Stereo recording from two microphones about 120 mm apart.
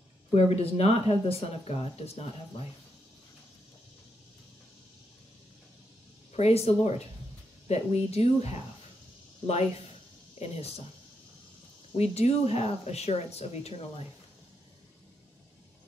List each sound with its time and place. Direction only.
0.3 s speech: 60° left (ahead or behind)
6.3 s speech: 60° left (ahead or behind)
11.9 s speech: 60° left (ahead or behind)